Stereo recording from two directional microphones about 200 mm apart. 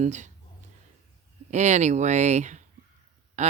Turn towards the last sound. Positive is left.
turn(degrees=-35)  # may be behind; listen again after turning